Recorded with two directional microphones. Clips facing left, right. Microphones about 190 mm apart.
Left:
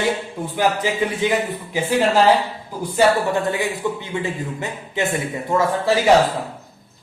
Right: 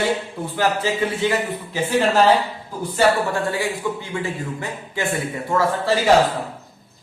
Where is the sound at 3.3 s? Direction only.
20° left (ahead or behind).